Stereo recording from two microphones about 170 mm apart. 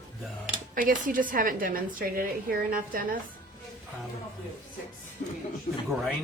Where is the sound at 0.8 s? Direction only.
55° right (ahead or behind).